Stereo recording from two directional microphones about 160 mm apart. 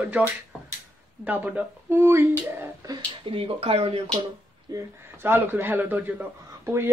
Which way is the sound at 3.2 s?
35° right (ahead or behind).